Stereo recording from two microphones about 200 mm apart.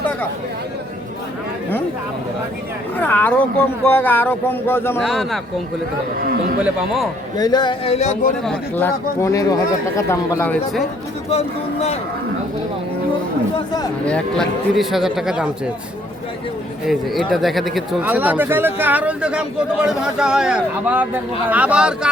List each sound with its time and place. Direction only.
3.0 s a sound: 10° left (ahead or behind)
3.8 s speech: 10° left (ahead or behind)
5.0 s speech: centre (ahead or behind)
6.2 s a man's voice: 50° right (ahead or behind)
6.6 s speech: 5° right (ahead or behind)
7.3 s a sound: 20° left (ahead or behind)
8.4 s speech: 10° left (ahead or behind)
11.3 s speech: 30° left (ahead or behind)
14.0 s speech: 5° left (ahead or behind)
16.8 s speech: centre (ahead or behind)